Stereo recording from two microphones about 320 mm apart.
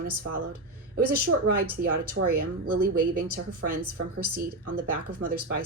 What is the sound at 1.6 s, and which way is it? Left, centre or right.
A woman's voice, right.